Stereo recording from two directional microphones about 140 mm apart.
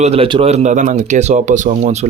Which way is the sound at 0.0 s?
45° right (ahead or behind).